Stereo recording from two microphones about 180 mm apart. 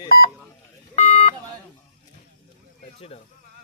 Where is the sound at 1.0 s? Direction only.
35° left (ahead or behind).